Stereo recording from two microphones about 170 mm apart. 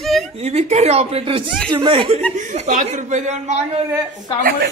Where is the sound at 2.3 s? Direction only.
45° right (ahead or behind).